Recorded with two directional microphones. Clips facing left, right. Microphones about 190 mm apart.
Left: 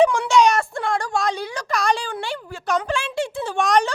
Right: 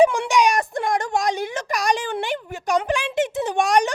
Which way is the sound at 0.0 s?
15° right (ahead or behind).